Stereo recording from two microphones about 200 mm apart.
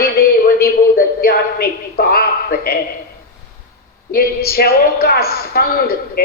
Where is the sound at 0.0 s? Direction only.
50° left (ahead or behind).